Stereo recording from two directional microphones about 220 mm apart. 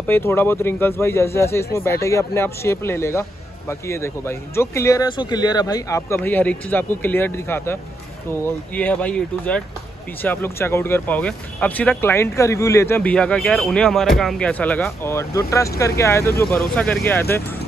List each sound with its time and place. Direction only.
0.0 s speech: 10° left (ahead or behind)